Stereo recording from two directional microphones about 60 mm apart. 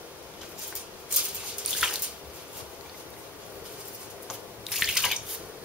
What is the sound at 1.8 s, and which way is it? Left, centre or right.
Bathtub, centre.